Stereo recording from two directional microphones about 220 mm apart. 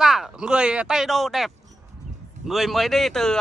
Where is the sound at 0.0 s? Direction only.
Centre (ahead or behind).